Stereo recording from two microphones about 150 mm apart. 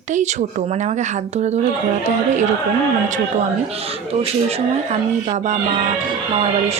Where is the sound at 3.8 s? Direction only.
40° right (ahead or behind).